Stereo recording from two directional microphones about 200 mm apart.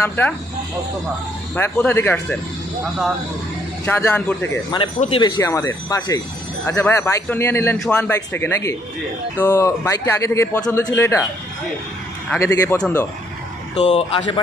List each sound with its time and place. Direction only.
0.0 s speech: 10° left (ahead or behind)
1.5 s speech: 10° left (ahead or behind)
3.8 s speech: 10° left (ahead or behind)
4.6 s speech: 25° left (ahead or behind)
12.3 s speech: 10° left (ahead or behind)
13.7 s speech: 30° left (ahead or behind)